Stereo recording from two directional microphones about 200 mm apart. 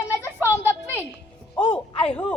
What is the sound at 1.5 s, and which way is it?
Speech, 25° left (ahead or behind).